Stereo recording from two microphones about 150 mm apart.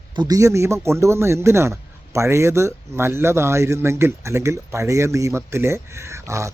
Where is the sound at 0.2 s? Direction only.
25° right (ahead or behind).